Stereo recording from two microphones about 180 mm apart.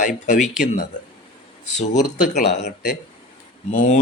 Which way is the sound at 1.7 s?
40° left (ahead or behind).